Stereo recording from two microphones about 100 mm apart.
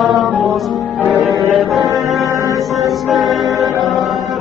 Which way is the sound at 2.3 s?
35° right (ahead or behind).